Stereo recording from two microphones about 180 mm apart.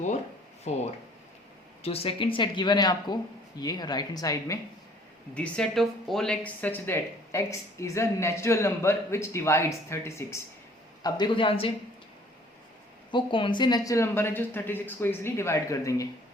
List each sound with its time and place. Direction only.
0.6 s speech: 40° left (ahead or behind); by 4.6 s 20° left (ahead or behind)
5.3 s speech: 5° left (ahead or behind)
11.0 s speech: 25° left (ahead or behind)
13.1 s speech: 25° left (ahead or behind)